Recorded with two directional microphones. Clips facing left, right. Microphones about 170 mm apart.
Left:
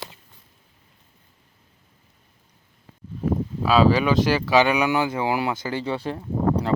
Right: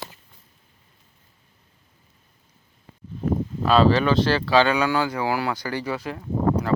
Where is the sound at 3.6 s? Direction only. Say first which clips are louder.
Even; 5° left (ahead or behind); by 6.2 s 30° left (ahead or behind).